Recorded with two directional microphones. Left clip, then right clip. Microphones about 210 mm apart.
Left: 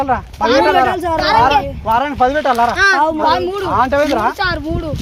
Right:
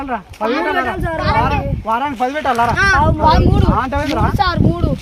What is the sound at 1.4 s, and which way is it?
Speech, 20° right (ahead or behind).